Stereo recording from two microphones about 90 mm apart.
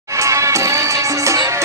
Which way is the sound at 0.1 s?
35° right (ahead or behind).